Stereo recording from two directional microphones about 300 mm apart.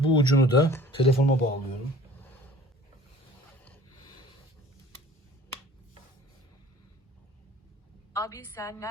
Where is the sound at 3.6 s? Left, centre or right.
Centre.